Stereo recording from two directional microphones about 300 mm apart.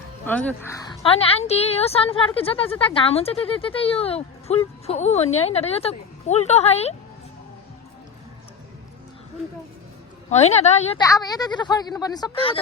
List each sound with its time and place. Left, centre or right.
0.3 s a woman's voice: centre; by 6.9 s left
10.2 s a woman's voice: left